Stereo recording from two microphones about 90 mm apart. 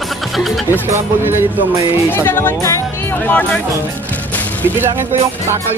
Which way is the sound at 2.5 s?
35° left (ahead or behind).